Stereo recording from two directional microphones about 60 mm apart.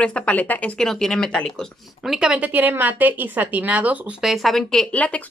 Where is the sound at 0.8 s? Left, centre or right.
Centre.